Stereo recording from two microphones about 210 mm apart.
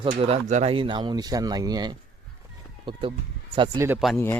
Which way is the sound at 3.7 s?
10° right (ahead or behind).